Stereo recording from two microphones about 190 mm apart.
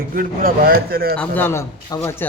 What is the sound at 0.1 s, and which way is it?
Speech, 50° right (ahead or behind).